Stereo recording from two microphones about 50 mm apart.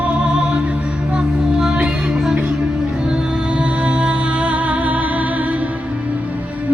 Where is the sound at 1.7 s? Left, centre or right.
Right.